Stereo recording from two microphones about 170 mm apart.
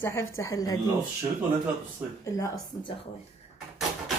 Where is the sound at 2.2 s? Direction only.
20° left (ahead or behind).